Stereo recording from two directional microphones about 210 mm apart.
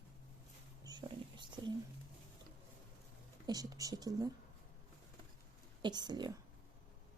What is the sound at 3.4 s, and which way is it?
Speech, 20° right (ahead or behind).